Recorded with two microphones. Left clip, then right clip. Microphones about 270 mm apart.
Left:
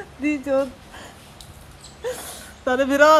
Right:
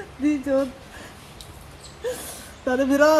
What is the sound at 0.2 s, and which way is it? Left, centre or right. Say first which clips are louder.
Speech: left 1 dB; centre.